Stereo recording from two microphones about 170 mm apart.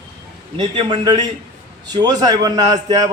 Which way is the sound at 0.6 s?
30° right (ahead or behind).